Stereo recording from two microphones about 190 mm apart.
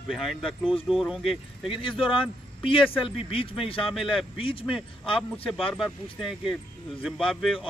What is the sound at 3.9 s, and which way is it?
Speech, centre (ahead or behind).